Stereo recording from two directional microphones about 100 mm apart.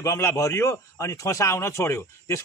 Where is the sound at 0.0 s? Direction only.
25° left (ahead or behind).